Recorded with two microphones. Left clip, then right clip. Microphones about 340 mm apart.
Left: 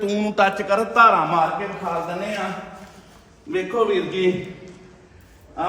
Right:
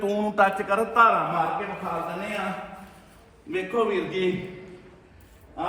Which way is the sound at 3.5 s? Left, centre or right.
Centre.